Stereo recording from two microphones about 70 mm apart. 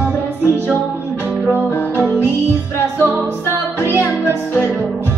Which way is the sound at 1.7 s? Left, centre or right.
Left.